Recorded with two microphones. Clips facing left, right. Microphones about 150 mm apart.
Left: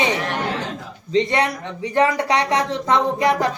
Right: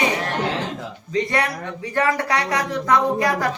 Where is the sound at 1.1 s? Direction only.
25° left (ahead or behind).